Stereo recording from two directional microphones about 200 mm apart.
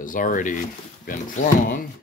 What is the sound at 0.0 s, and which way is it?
Speech, 40° left (ahead or behind).